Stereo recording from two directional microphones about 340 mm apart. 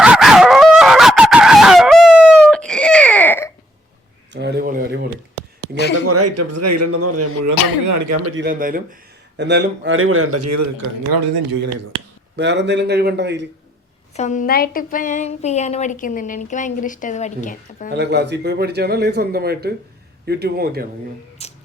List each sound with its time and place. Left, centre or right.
0.0 s dog: centre
4.3 s a sound: right
6.1 s speech: right
8.4 s a man's voice: right
11.1 s speech: right
12.4 s a man's voice: right
14.2 s speech: left
17.9 s a man's voice: right
21.4 s a sound: centre